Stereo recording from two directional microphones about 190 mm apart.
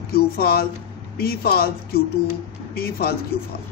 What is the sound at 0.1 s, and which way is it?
A man's voice, 55° left (ahead or behind).